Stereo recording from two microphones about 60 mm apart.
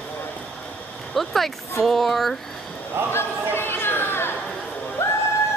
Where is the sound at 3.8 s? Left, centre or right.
Left.